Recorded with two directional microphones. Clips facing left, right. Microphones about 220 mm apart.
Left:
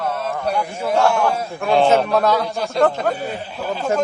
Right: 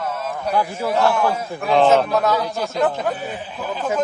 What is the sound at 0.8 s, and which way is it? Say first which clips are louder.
A man's voice: left 3 dB; centre (ahead or behind).